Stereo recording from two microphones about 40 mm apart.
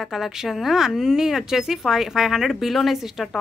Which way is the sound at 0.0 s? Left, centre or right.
Centre.